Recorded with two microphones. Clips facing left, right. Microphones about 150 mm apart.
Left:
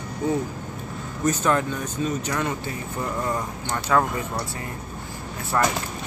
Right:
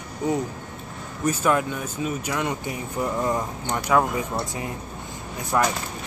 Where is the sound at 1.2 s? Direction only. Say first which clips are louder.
Even; 10° right (ahead or behind).